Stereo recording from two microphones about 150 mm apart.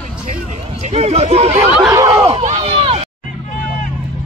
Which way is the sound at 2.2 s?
45° right (ahead or behind).